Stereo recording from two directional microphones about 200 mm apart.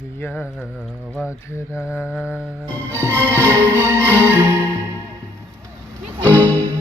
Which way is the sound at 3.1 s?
10° left (ahead or behind).